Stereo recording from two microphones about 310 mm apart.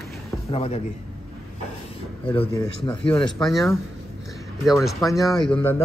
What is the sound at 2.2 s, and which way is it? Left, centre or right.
Speech, centre.